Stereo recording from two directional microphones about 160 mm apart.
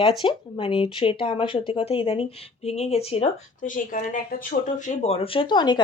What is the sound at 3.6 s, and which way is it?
Speech, 55° left (ahead or behind).